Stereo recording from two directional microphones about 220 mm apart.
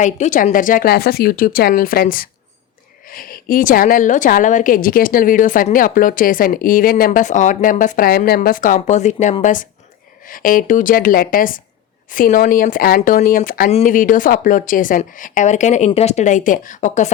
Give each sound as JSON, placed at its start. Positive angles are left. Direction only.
{"t": 0.0, "sound": "a woman's voice", "side_deg": 35}